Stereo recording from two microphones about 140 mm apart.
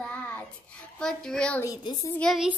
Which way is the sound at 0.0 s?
10° left (ahead or behind).